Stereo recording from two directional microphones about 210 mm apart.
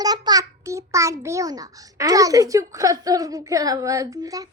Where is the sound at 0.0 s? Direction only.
20° right (ahead or behind).